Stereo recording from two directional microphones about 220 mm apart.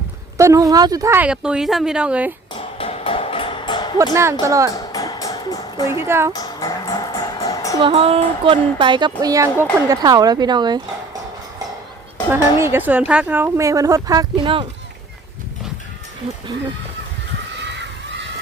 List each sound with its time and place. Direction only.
0.3 s a woman's voice: 15° right (ahead or behind)
2.6 s a sound: 25° left (ahead or behind)
3.9 s a woman's voice: 15° right (ahead or behind)
4.7 s music: 15° left (ahead or behind)
5.9 s a woman's voice: 10° right (ahead or behind)
6.3 s music: 15° left (ahead or behind)
7.8 s a woman's voice: 25° right (ahead or behind)
12.3 s a woman's voice: 10° right (ahead or behind)